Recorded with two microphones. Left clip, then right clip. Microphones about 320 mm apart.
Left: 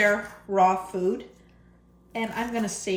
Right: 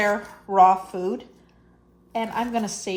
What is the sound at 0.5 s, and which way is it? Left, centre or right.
Speech, centre.